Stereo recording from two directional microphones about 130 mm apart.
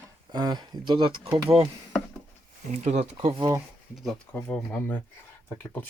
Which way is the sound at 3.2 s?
45° right (ahead or behind).